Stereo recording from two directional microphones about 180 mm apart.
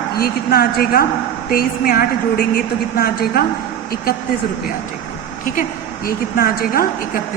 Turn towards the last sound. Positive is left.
turn(degrees=55)  # may be behind; listen again after turning